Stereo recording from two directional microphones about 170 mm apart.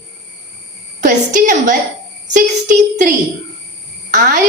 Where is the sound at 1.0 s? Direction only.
50° right (ahead or behind).